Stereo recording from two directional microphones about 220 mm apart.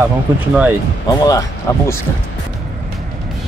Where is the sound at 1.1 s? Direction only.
15° left (ahead or behind).